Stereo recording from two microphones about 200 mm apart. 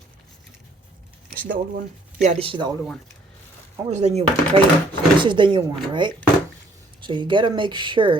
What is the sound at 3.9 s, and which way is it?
Speech, 35° right (ahead or behind).